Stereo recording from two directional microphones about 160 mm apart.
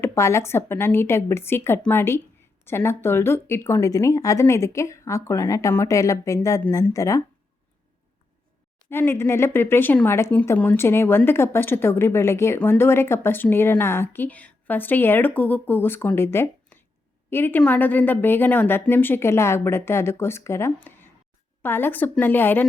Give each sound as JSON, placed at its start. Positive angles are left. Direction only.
{"t": 0.0, "sound": "speech", "side_deg": 15}
{"t": 8.9, "sound": "speech", "side_deg": 15}